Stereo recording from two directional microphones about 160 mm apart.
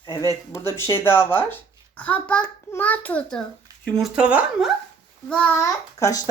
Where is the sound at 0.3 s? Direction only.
20° left (ahead or behind); by 4.7 s 10° right (ahead or behind).